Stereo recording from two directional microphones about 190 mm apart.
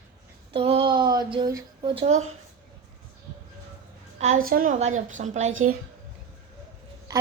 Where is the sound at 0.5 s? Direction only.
30° right (ahead or behind).